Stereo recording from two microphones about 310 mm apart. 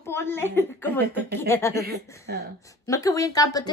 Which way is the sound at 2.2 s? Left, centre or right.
Right.